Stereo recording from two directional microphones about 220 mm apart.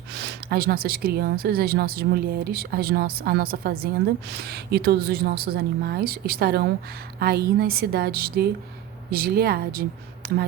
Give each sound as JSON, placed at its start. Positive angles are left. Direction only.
{"t": 0.1, "sound": "a woman's voice", "side_deg": -50}